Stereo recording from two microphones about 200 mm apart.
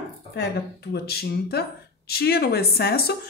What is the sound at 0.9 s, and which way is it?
A woman's voice, 55° left (ahead or behind).